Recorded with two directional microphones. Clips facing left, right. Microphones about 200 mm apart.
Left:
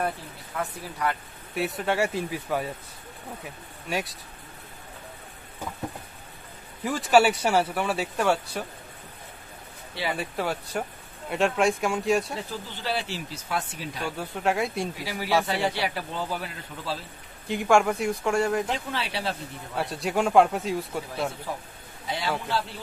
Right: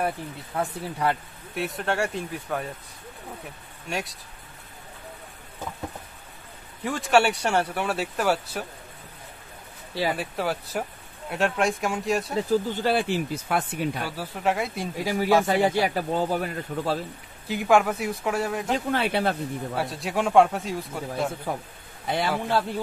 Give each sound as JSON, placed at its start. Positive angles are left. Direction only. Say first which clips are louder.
{"t": 0.6, "sound": "speech", "louder": "right 3 dB", "side_deg": -30}
{"t": 1.5, "sound": "speech", "louder": "left 1 dB", "side_deg": 0}
{"t": 3.9, "sound": "speech", "louder": "left 1 dB", "side_deg": 0}
{"t": 6.8, "sound": "speech", "louder": "left 1 dB", "side_deg": 0}
{"t": 10.1, "sound": "speech", "louder": "right 1 dB", "side_deg": 0}
{"t": 12.4, "sound": "speech", "louder": "right 9 dB", "side_deg": -45}
{"t": 14.0, "sound": "speech", "louder": "even", "side_deg": -5}
{"t": 15.0, "sound": "speech", "louder": "right 6 dB", "side_deg": -45}
{"t": 17.5, "sound": "speech", "louder": "even", "side_deg": 0}
{"t": 18.7, "sound": "speech", "louder": "right 6 dB", "side_deg": -50}
{"t": 19.7, "sound": "speech", "louder": "left 4 dB", "side_deg": 0}
{"t": 22.0, "sound": "a man's voice", "louder": "right 4 dB", "side_deg": -55}